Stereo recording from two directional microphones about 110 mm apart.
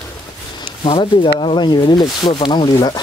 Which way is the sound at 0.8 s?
50° left (ahead or behind).